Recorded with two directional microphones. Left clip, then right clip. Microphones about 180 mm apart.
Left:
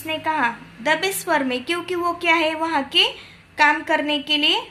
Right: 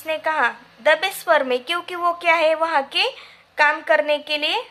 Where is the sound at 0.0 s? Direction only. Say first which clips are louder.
Right 1 dB; 45° right (ahead or behind).